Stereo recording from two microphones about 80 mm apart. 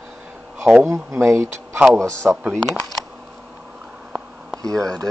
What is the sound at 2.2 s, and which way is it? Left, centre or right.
Speech, centre.